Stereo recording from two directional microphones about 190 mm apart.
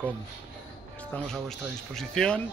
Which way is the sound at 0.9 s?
5° left (ahead or behind).